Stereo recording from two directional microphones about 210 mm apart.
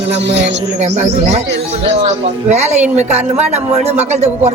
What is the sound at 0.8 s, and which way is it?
A man's voice, 30° right (ahead or behind).